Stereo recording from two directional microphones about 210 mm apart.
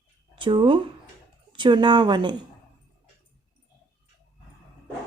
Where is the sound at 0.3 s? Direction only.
25° right (ahead or behind).